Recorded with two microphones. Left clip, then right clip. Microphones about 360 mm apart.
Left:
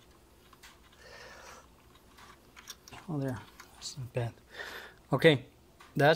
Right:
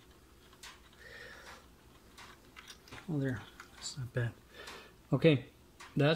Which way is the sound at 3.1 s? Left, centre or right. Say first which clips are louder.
Left 1 dB; centre.